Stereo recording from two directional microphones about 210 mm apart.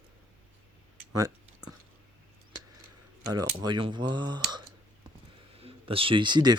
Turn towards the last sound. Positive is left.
turn(degrees=-20)  # may be behind; listen again after turning